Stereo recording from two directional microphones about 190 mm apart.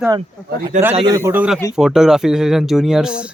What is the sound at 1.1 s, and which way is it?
A man's voice, 15° right (ahead or behind).